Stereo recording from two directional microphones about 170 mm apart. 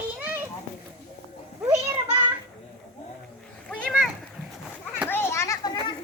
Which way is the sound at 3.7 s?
5° left (ahead or behind).